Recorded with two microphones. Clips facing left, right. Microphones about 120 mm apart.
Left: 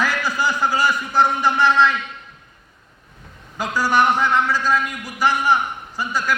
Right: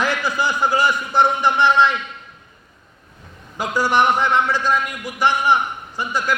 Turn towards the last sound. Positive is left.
turn(degrees=-15)  # may be behind; listen again after turning